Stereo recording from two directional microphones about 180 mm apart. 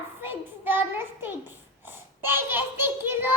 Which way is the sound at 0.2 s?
10° right (ahead or behind).